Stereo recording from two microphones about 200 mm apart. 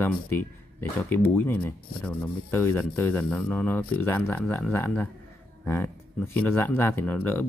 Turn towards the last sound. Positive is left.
turn(degrees=10)  # may be behind; listen again after turning